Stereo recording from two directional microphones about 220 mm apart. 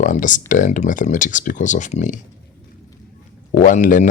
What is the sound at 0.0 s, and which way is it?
Speech, 35° left (ahead or behind).